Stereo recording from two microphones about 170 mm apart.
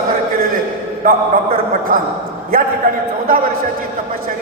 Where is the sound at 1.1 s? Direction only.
55° right (ahead or behind).